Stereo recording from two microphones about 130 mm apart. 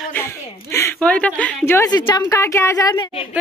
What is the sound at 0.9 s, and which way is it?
Speech, 10° left (ahead or behind).